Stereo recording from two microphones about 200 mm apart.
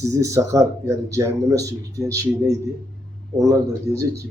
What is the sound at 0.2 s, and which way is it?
A man's voice, 15° right (ahead or behind).